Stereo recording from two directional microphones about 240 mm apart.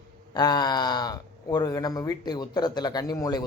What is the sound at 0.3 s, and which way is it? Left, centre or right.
Speech, centre.